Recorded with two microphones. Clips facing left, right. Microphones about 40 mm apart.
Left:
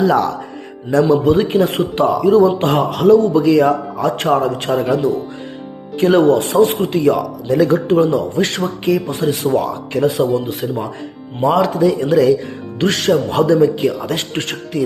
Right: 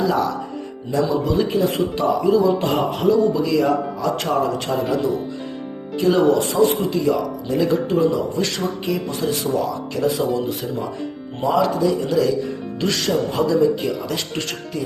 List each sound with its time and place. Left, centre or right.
0.0 s music: left
1.0 s a man's voice: left
7.5 s a man's voice: left
7.9 s a man's voice: left
9.0 s a man's voice: left
11.4 s a man's voice: left
14.5 s music: left